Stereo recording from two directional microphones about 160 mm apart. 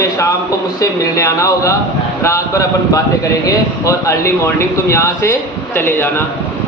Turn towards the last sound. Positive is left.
turn(degrees=15)  # may be behind; listen again after turning